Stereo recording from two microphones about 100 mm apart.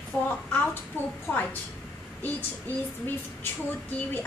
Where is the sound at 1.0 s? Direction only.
20° left (ahead or behind).